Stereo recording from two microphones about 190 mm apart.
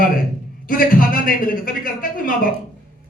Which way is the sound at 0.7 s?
45° left (ahead or behind).